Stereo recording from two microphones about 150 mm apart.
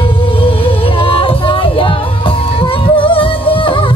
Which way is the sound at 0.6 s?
35° left (ahead or behind).